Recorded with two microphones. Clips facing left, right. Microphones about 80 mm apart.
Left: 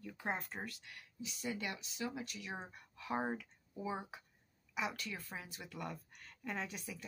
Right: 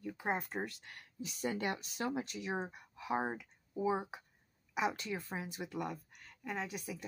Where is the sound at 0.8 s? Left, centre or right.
Right.